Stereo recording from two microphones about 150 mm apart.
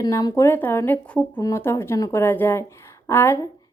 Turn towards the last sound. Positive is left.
turn(degrees=15)  # may be behind; listen again after turning